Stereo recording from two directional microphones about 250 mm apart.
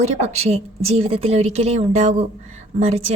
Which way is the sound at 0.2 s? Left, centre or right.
Right.